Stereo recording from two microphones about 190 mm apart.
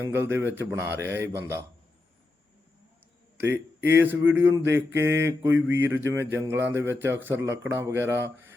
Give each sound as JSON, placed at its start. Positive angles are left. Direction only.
{"t": 0.0, "sound": "a man's voice", "side_deg": -10}
{"t": 3.4, "sound": "speech", "side_deg": -70}
{"t": 4.0, "sound": "a man's voice", "side_deg": -10}
{"t": 5.5, "sound": "speech", "side_deg": -85}
{"t": 6.1, "sound": "a man's voice", "side_deg": -15}